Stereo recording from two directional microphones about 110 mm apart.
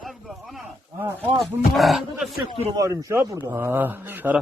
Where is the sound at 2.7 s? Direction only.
30° right (ahead or behind); by 4.4 s 15° right (ahead or behind).